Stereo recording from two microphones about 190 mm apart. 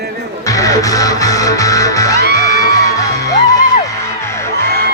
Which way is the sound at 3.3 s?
20° left (ahead or behind).